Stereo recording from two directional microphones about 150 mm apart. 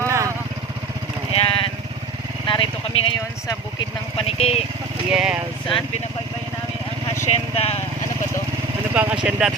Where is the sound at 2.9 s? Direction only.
40° left (ahead or behind).